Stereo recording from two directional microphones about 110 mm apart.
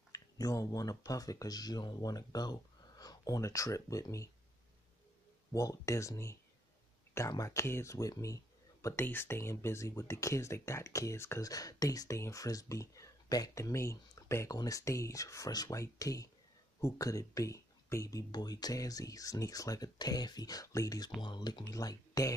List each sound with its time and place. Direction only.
0.1 s speech: 30° left (ahead or behind)
5.5 s speech: 30° left (ahead or behind)
8.8 s speech: 20° left (ahead or behind)